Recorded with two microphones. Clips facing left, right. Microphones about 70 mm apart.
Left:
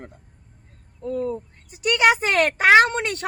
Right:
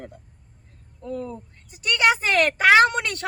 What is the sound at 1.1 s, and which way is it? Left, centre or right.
Speech, left.